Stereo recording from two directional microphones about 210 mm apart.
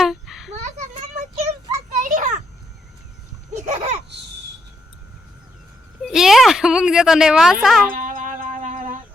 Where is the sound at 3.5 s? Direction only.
35° right (ahead or behind).